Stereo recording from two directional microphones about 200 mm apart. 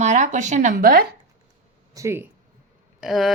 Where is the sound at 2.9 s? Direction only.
Centre (ahead or behind).